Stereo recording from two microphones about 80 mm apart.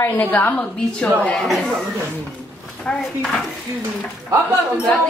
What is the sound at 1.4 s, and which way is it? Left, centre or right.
Speech, centre.